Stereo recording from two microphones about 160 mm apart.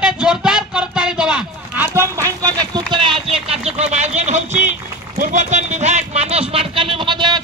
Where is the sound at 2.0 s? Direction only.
20° right (ahead or behind).